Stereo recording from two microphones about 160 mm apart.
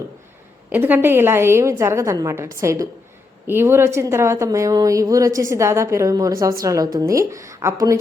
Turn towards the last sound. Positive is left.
turn(degrees=-20)  # may be behind; listen again after turning